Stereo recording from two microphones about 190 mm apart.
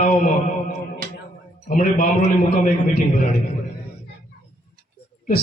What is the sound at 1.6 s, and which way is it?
A man's voice, 45° left (ahead or behind).